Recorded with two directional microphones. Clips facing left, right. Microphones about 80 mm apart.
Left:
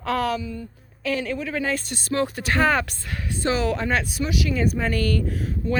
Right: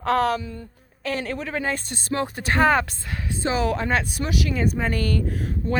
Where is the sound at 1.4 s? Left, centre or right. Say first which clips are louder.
Left 1 dB; right.